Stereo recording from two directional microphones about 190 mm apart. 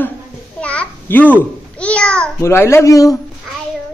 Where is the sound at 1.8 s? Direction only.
5° left (ahead or behind).